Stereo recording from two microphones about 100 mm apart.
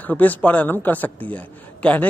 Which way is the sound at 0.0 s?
15° left (ahead or behind).